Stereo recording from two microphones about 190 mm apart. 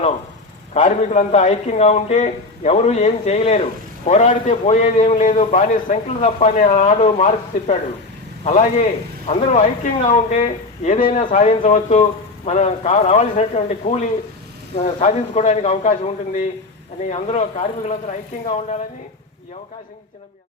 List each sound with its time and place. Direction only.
0.7 s a man's voice: 35° left (ahead or behind)